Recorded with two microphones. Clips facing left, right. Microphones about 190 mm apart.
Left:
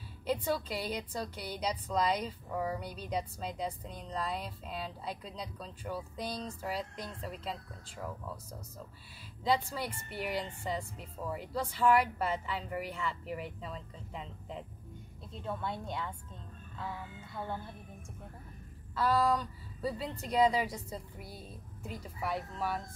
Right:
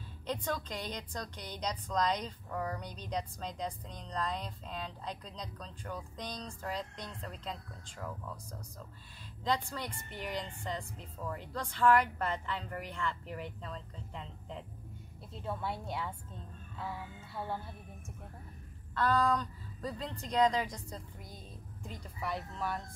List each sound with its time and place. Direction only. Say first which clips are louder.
0.3 s a woman's voice: left 4 dB; 10° left (ahead or behind)
9.4 s a woman's voice: left 3 dB; 10° left (ahead or behind)
18.9 s a woman's voice: left 1 dB; 5° left (ahead or behind)